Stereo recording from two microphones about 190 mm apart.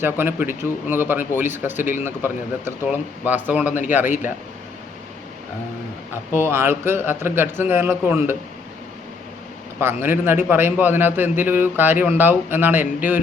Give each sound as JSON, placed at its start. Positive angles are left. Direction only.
{"t": 0.0, "sound": "a man's voice", "side_deg": -10}
{"t": 6.3, "sound": "a man's voice", "side_deg": -15}
{"t": 9.8, "sound": "a man's voice", "side_deg": -10}